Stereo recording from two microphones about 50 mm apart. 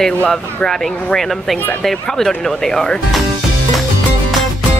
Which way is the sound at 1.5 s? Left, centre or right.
Left.